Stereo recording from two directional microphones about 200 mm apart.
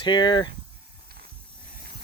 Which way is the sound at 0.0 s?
20° left (ahead or behind).